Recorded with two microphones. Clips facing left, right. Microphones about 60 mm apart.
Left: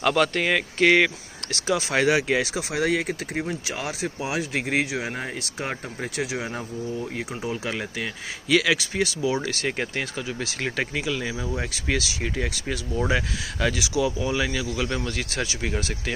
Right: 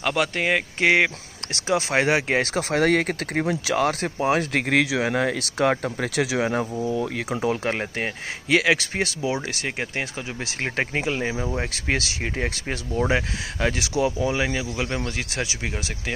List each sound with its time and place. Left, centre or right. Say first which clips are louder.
0.0 s speech: left 2 dB; centre; by 7.6 s right
7.6 s speech: right 4 dB; right
8.5 s speech: right 1 dB; right
9.3 s speech: left 1 dB; right
10.6 s speech: right 3 dB; right